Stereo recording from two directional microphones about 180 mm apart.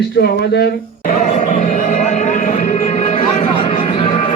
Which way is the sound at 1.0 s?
45° left (ahead or behind).